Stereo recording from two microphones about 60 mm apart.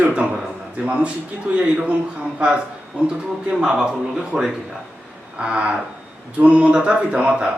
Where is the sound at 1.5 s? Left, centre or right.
Right.